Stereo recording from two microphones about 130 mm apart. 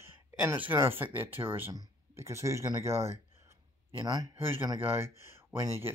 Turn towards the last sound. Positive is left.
turn(degrees=-20)  # may be behind; listen again after turning